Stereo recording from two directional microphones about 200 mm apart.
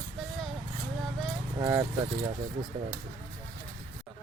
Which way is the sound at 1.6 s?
15° right (ahead or behind).